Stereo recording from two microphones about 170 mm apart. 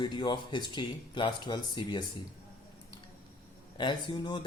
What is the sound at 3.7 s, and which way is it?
Speech, 30° left (ahead or behind).